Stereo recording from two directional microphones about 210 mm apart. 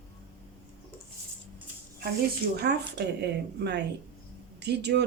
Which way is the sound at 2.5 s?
50° right (ahead or behind).